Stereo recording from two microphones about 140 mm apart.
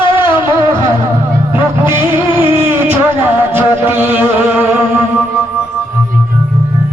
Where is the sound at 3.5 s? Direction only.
15° right (ahead or behind).